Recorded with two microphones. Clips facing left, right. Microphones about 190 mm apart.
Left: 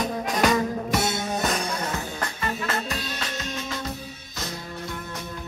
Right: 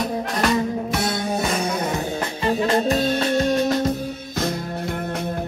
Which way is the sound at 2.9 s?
50° right (ahead or behind).